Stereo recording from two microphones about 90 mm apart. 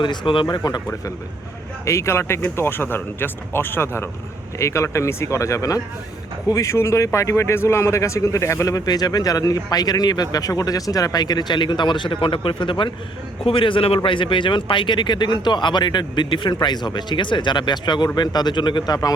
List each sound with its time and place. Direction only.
0.0 s speech: 65° left (ahead or behind)
1.8 s speech: 35° left (ahead or behind); by 12.9 s 65° left (ahead or behind)
13.4 s speech: 80° left; by 18.9 s 60° left (ahead or behind)